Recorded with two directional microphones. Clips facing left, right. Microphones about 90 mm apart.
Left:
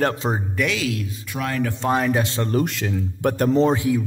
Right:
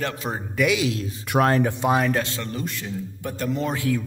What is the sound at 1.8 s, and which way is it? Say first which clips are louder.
Speech: left 2 dB; centre (ahead or behind).